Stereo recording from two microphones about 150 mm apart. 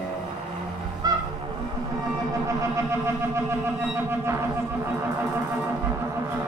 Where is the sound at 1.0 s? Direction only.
25° right (ahead or behind).